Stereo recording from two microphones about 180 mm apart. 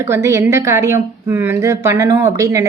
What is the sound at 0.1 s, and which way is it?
A woman's voice, 15° right (ahead or behind).